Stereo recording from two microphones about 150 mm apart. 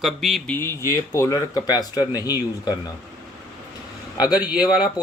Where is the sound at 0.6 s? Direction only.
20° left (ahead or behind).